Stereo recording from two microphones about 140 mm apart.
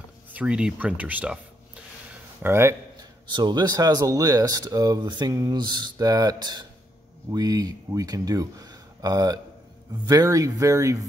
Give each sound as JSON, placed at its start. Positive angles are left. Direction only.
{"t": 0.3, "sound": "speech", "side_deg": -10}
{"t": 2.4, "sound": "speech", "side_deg": -15}
{"t": 3.0, "sound": "speech", "side_deg": -35}